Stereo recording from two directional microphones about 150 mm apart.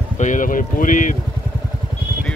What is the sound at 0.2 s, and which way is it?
Speech, 60° left (ahead or behind).